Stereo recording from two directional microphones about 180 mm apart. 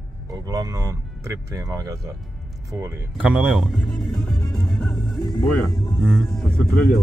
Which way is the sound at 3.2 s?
5° right (ahead or behind).